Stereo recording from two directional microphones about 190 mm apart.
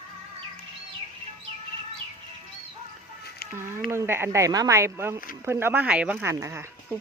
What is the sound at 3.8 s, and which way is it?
Speech, 10° right (ahead or behind).